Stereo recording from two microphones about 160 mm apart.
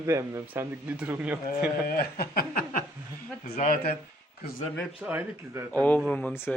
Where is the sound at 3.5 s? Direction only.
55° left (ahead or behind).